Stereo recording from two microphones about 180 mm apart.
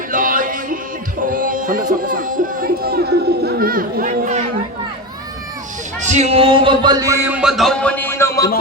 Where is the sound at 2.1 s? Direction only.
50° right (ahead or behind).